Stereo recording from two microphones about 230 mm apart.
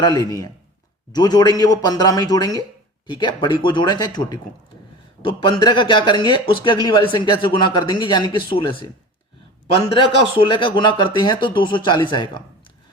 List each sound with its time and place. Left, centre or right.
0.0 s speech: centre
9.9 s speech: left